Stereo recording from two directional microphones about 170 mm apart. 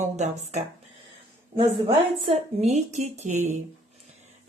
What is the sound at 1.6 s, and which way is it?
A woman's voice, 30° right (ahead or behind).